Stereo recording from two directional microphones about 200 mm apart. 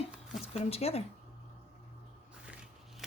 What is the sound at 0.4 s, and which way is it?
Speech, 30° left (ahead or behind).